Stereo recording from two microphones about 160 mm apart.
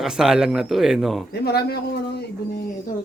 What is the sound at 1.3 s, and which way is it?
Speech, 90° left.